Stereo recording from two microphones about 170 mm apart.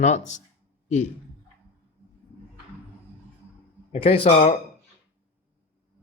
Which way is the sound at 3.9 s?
35° left (ahead or behind).